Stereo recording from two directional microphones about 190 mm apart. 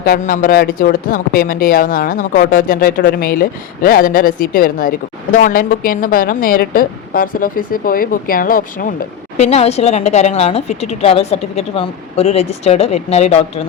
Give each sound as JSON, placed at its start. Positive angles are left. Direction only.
{"t": 0.0, "sound": "a woman's voice", "side_deg": 50}
{"t": 9.4, "sound": "a woman's voice", "side_deg": 35}